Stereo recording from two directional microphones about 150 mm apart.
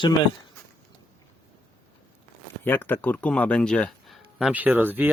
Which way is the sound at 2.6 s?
15° left (ahead or behind).